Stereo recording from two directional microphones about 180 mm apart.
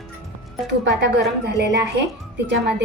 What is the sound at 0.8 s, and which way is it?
A woman's voice, 70° right (ahead or behind).